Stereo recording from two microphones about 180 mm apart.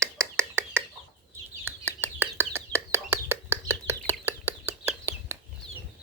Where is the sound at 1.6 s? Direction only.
15° right (ahead or behind).